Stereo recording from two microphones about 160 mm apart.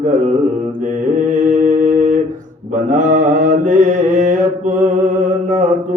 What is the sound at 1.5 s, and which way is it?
Humming, 50° right (ahead or behind).